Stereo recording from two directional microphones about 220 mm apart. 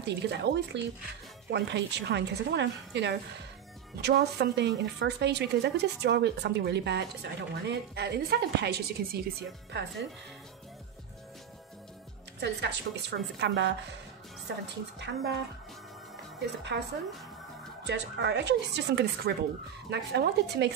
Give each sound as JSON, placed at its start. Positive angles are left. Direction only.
{"t": 0.0, "sound": "a woman's voice", "side_deg": -50}
{"t": 12.4, "sound": "a woman's voice", "side_deg": -50}
{"t": 17.8, "sound": "a woman's voice", "side_deg": -50}